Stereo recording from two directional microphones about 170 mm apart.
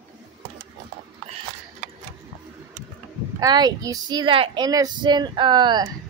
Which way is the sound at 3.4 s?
25° right (ahead or behind).